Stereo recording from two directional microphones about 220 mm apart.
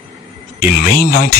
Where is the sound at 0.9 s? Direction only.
45° left (ahead or behind).